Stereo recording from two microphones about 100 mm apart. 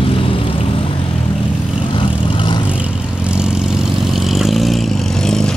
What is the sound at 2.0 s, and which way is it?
Vehicle, 55° left (ahead or behind).